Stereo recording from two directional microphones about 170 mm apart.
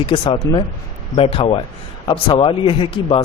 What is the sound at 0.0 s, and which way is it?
A man's voice, 30° left (ahead or behind).